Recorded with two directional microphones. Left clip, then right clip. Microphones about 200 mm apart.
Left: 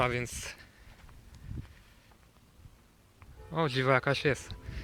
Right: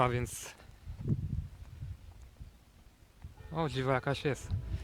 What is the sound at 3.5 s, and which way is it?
Speech, centre (ahead or behind).